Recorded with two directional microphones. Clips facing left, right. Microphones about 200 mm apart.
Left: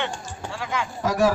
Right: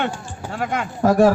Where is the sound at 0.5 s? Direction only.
55° right (ahead or behind).